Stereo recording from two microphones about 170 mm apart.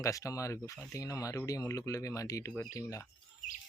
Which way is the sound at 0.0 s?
20° left (ahead or behind).